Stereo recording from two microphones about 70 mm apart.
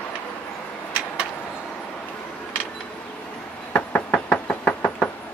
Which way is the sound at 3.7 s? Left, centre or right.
Centre.